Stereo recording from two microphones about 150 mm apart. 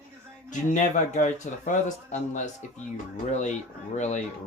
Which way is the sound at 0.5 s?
55° left (ahead or behind).